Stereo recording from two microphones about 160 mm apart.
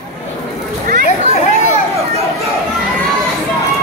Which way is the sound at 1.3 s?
45° left (ahead or behind).